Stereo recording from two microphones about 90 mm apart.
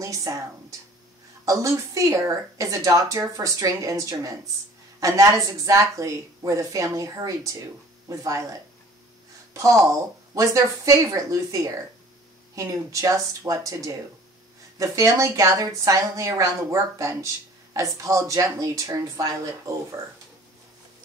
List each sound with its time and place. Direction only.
0.0 s a woman's voice: 40° right (ahead or behind)